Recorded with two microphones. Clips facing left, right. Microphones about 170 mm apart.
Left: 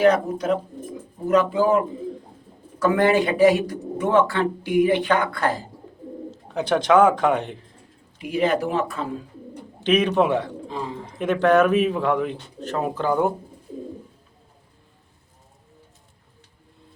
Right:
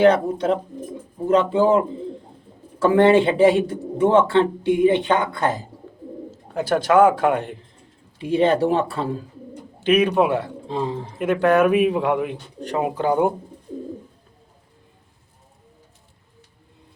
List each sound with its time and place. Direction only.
0.0 s a man's voice: 30° right (ahead or behind)
6.3 s a man's voice: 5° right (ahead or behind)
8.2 s speech: 30° right (ahead or behind)
9.8 s speech: 10° right (ahead or behind)
10.7 s a man's voice: 30° right (ahead or behind)
11.2 s speech: 10° right (ahead or behind)